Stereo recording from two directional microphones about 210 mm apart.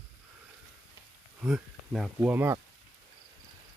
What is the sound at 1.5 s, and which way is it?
Speech, 5° right (ahead or behind).